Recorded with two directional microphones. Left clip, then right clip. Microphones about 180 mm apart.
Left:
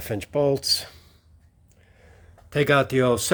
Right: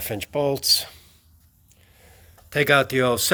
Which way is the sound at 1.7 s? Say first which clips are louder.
Right 1 dB; 25° left (ahead or behind).